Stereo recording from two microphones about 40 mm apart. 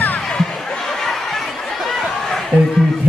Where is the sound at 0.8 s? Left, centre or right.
Centre.